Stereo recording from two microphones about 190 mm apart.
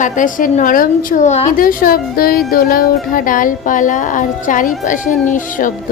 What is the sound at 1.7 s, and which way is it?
A woman's voice, 50° left (ahead or behind).